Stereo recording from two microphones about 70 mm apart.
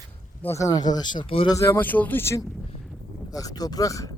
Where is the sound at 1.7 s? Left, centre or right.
Left.